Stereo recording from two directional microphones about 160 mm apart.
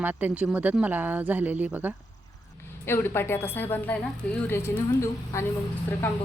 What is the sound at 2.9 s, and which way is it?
Speech, 15° left (ahead or behind).